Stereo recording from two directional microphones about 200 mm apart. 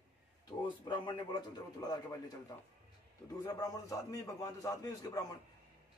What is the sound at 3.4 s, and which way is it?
A man's voice, 20° left (ahead or behind).